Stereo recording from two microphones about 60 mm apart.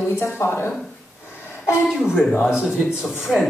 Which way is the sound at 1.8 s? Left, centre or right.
Centre.